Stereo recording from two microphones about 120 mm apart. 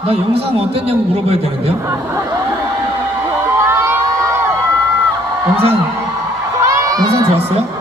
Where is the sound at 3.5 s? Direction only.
20° right (ahead or behind).